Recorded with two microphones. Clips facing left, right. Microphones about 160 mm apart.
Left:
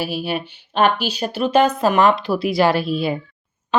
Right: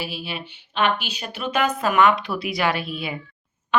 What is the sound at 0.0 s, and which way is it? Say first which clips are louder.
A woman's voice: left 8 dB; 45° left (ahead or behind).